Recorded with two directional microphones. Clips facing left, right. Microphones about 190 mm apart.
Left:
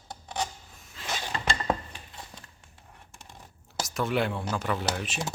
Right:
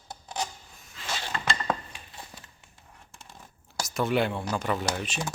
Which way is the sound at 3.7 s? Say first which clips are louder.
Right 2 dB; centre (ahead or behind).